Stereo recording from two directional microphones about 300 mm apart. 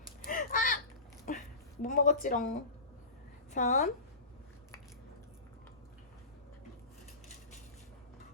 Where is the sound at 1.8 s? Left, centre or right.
Left.